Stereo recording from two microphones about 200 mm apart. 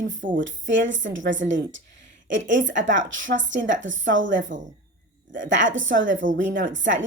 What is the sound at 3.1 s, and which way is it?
Speech, 70° right (ahead or behind).